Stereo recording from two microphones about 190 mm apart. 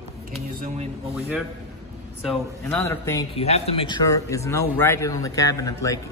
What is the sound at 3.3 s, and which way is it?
A man's voice, 35° left (ahead or behind).